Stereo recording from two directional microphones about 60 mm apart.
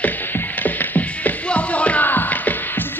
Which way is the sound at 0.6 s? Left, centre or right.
Left.